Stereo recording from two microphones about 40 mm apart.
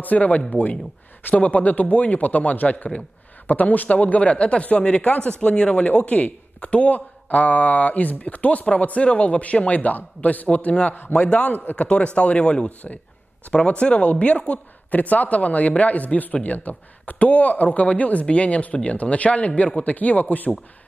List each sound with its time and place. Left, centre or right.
0.0 s speech: left